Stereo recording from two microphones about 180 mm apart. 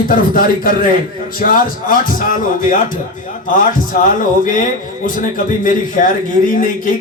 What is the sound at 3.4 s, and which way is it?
A man's voice, 50° left (ahead or behind).